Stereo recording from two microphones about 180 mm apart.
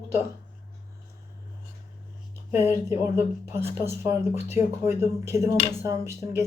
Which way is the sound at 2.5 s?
15° right (ahead or behind).